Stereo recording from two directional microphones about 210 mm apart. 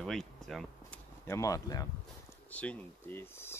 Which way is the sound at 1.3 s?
15° left (ahead or behind).